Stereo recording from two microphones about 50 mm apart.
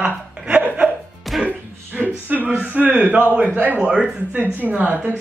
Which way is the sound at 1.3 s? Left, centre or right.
Centre.